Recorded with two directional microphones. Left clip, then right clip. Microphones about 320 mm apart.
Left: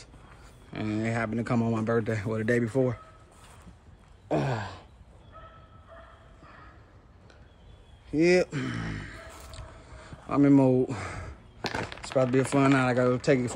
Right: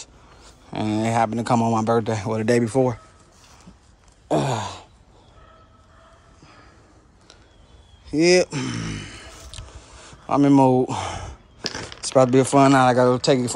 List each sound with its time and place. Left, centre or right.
0.7 s speech: centre
4.3 s throat clearing: centre
8.1 s a sound: centre
12.4 s speech: centre